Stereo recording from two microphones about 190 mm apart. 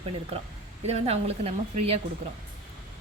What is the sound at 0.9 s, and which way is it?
Speech, 35° right (ahead or behind).